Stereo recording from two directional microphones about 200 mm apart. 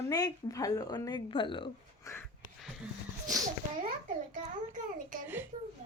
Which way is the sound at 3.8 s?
40° right (ahead or behind).